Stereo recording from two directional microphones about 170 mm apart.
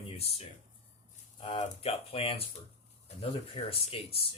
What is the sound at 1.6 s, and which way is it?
Speech, 35° left (ahead or behind).